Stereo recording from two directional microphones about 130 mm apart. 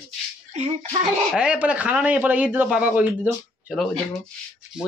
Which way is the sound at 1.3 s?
10° right (ahead or behind).